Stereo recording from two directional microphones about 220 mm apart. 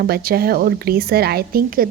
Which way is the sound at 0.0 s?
45° right (ahead or behind).